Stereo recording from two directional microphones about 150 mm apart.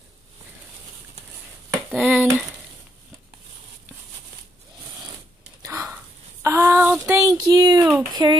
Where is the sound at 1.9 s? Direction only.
10° right (ahead or behind).